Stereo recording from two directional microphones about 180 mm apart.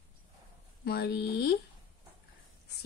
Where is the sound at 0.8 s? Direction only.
65° left (ahead or behind).